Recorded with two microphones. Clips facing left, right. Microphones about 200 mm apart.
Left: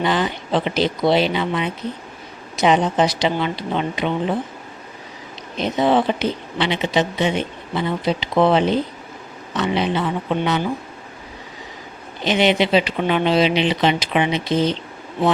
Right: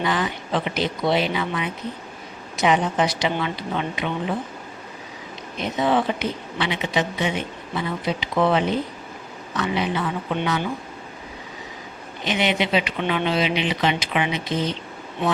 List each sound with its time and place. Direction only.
0.0 s speech: 30° left (ahead or behind)
5.5 s speech: 30° left (ahead or behind)
12.2 s speech: 30° left (ahead or behind)